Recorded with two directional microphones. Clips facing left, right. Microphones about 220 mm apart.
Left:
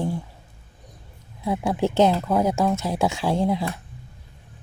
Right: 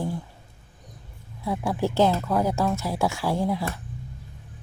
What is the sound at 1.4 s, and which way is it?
Speech, 20° left (ahead or behind).